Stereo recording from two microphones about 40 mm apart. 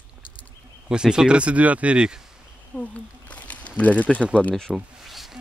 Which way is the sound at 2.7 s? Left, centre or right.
Left.